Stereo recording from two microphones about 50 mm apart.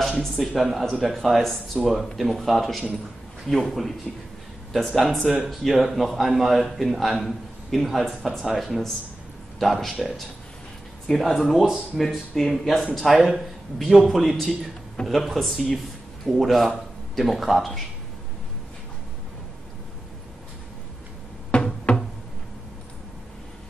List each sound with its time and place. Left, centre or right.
0.2 s a man's voice: centre
11.1 s a man's voice: centre
11.5 s speech: centre
12.0 s a man's voice: centre
21.5 s a sound: left